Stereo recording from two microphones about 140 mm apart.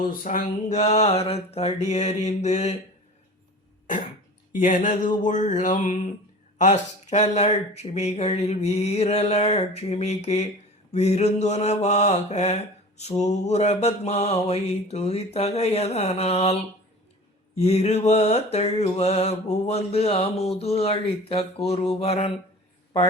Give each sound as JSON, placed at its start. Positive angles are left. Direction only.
{"t": 0.0, "sound": "mantra", "side_deg": 90}
{"t": 4.5, "sound": "a sound", "side_deg": 65}
{"t": 6.6, "sound": "mantra", "side_deg": 55}